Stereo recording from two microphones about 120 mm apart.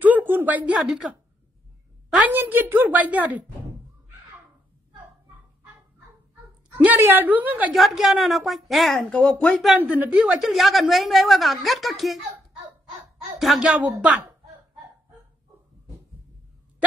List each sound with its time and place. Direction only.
0.0 s a sound: 15° right (ahead or behind)
2.1 s a woman's voice: 15° right (ahead or behind)
6.8 s a woman's voice: 15° right (ahead or behind)
7.7 s a woman's voice: centre (ahead or behind)
9.8 s a woman's voice: 10° right (ahead or behind)
13.4 s speech: centre (ahead or behind)